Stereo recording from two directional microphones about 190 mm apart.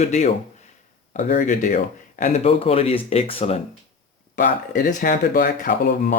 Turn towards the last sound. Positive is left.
turn(degrees=45)  # may be behind; listen again after turning